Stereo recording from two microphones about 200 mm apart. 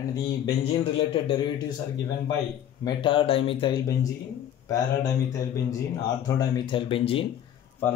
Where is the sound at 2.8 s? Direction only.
25° left (ahead or behind).